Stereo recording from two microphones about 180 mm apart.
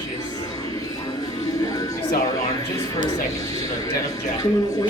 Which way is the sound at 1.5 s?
20° left (ahead or behind).